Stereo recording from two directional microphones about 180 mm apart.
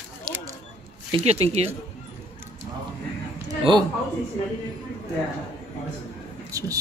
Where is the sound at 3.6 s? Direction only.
25° right (ahead or behind).